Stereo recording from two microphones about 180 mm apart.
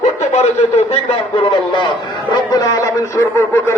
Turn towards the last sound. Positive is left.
turn(degrees=15)  # may be behind; listen again after turning